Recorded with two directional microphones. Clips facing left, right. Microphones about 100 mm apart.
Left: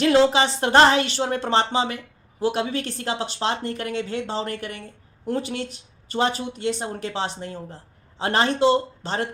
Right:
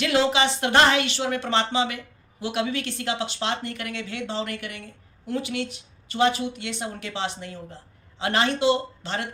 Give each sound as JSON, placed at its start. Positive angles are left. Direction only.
{"t": 0.0, "sound": "a woman's voice", "side_deg": 35}